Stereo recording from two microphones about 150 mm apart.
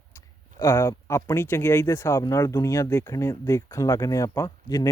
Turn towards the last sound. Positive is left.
turn(degrees=20)  # may be behind; listen again after turning